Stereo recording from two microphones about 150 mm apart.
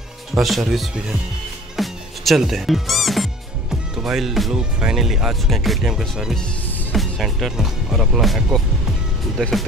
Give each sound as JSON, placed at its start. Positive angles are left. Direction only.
{"t": 0.3, "sound": "speech", "side_deg": 0}